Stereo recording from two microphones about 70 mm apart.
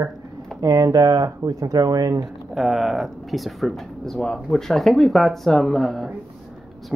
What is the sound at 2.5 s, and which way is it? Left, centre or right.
Speech, centre.